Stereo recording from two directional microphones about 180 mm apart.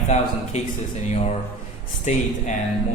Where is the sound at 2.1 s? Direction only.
40° left (ahead or behind).